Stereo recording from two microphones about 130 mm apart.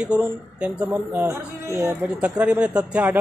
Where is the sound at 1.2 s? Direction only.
20° right (ahead or behind).